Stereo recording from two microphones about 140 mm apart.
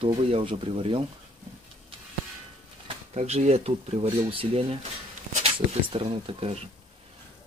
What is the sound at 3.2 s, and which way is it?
Speech, 50° right (ahead or behind).